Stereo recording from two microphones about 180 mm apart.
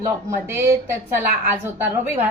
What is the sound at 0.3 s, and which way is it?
A woman's voice, 15° right (ahead or behind).